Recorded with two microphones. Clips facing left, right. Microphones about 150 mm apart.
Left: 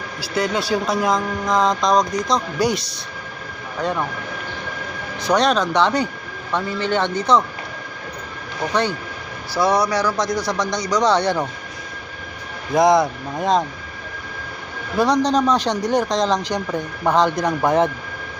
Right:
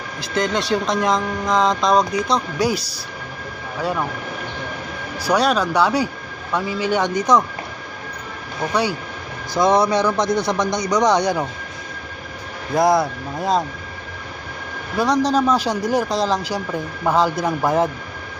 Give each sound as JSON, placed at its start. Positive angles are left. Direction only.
{"t": 0.2, "sound": "speech", "side_deg": 5}
{"t": 5.2, "sound": "speech", "side_deg": -5}
{"t": 8.7, "sound": "speech", "side_deg": -10}
{"t": 9.6, "sound": "speech", "side_deg": -20}
{"t": 12.7, "sound": "speech", "side_deg": 0}
{"t": 14.9, "sound": "speech", "side_deg": 0}